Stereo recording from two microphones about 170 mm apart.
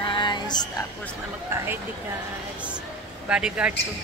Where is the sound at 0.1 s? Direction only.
25° left (ahead or behind).